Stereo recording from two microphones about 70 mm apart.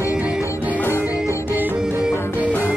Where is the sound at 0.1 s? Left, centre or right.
Centre.